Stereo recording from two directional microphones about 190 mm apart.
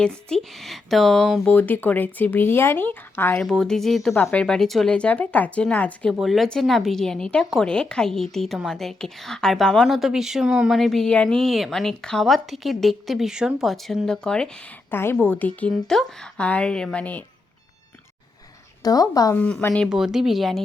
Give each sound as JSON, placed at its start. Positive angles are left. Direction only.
{"t": 0.0, "sound": "speech", "side_deg": 5}
{"t": 18.8, "sound": "speech", "side_deg": 20}
{"t": 19.4, "sound": "speech", "side_deg": 5}